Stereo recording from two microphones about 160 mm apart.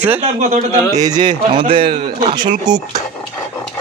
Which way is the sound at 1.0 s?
25° right (ahead or behind).